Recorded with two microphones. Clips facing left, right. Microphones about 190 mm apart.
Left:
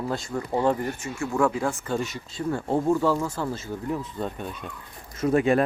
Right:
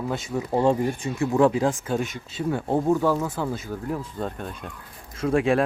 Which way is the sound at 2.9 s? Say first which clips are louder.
Right 1 dB; 5° right (ahead or behind).